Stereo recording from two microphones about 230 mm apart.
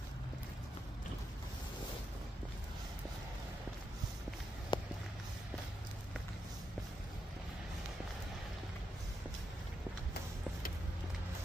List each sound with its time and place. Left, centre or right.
4.7 s walk: centre